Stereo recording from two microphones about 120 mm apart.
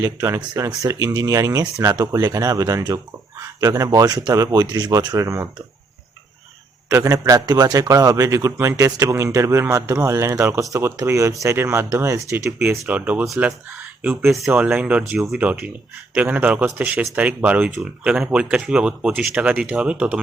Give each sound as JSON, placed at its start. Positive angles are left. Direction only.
{"t": 0.0, "sound": "a man's voice", "side_deg": -25}
{"t": 6.8, "sound": "a man's voice", "side_deg": -25}
{"t": 12.9, "sound": "speech", "side_deg": -15}
{"t": 13.2, "sound": "speech", "side_deg": 0}
{"t": 14.0, "sound": "speech", "side_deg": -20}